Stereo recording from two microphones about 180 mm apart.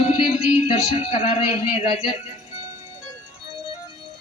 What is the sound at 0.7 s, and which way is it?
A man's voice, 35° left (ahead or behind).